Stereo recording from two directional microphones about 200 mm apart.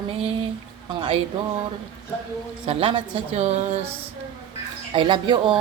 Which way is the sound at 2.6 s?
25° right (ahead or behind).